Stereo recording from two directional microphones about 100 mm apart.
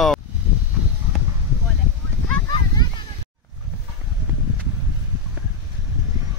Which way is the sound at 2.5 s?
50° left (ahead or behind).